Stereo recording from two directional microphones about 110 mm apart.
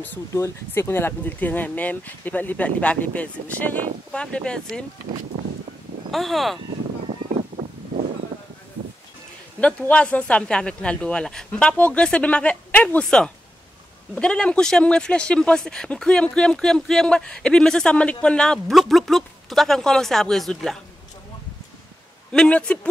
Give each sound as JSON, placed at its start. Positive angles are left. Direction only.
{"t": 0.3, "sound": "speech", "side_deg": 25}
{"t": 6.1, "sound": "speech", "side_deg": 0}
{"t": 7.1, "sound": "a sound", "side_deg": -70}
{"t": 9.6, "sound": "speech", "side_deg": 10}
{"t": 22.3, "sound": "speech", "side_deg": 10}